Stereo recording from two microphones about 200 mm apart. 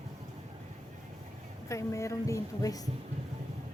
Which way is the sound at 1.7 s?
15° left (ahead or behind).